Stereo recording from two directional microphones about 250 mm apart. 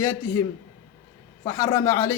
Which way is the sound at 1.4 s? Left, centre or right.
Centre.